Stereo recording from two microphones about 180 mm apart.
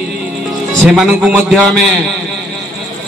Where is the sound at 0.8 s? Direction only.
Centre (ahead or behind).